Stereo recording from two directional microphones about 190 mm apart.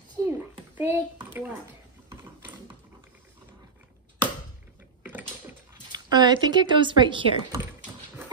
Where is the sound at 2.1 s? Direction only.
15° right (ahead or behind).